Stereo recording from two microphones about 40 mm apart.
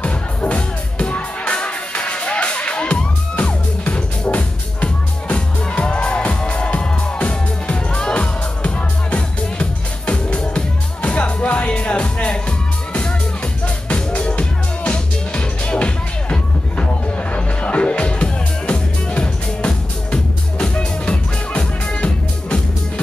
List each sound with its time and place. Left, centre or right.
0.0 s music: left